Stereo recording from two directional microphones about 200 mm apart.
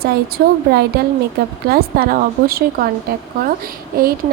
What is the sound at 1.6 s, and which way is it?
Speech, 50° right (ahead or behind).